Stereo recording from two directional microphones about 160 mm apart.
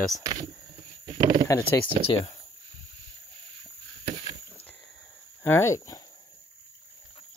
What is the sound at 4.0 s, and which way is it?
Rowboat, 40° right (ahead or behind).